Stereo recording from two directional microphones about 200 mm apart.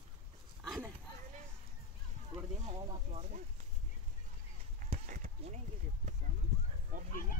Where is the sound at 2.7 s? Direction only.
35° right (ahead or behind).